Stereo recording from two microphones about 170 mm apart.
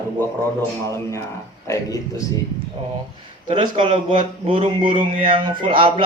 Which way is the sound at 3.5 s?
30° right (ahead or behind).